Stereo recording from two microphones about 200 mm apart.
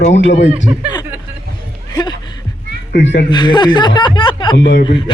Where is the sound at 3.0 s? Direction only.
65° left (ahead or behind).